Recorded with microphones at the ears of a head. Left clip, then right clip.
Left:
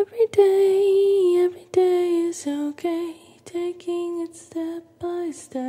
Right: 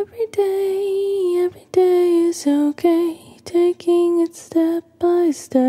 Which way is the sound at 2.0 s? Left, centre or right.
Right.